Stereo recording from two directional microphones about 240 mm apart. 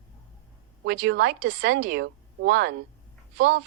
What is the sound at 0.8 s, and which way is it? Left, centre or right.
A woman's voice, right.